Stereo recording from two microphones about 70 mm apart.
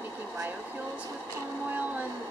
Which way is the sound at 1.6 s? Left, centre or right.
Right.